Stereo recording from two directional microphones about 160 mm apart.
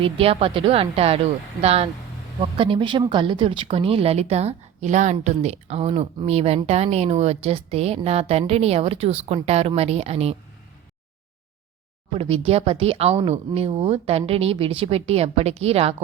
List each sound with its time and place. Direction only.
0.0 s a woman's voice: 35° right (ahead or behind)
12.1 s a woman's voice: 35° right (ahead or behind)